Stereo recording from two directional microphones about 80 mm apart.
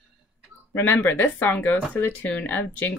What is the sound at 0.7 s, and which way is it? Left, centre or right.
A woman's voice, left.